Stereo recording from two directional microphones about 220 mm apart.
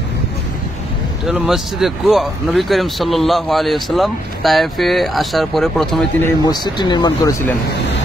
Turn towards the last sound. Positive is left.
turn(degrees=20)  # may be behind; listen again after turning